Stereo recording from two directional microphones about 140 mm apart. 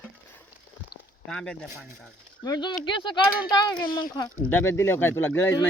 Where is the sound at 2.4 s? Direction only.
30° left (ahead or behind).